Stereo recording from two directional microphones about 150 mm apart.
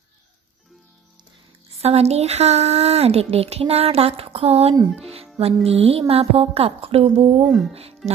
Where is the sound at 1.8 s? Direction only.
45° right (ahead or behind).